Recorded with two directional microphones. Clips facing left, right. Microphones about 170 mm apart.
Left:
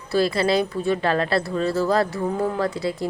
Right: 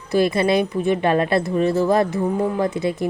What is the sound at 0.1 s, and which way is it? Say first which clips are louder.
Speech: right 3 dB; 20° right (ahead or behind).